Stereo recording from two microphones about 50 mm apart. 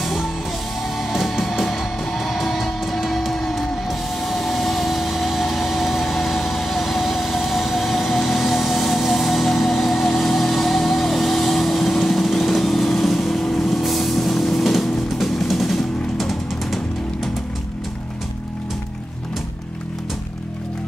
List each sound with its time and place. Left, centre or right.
0.0 s music: centre
4.2 s vehicle: centre
15.1 s music: centre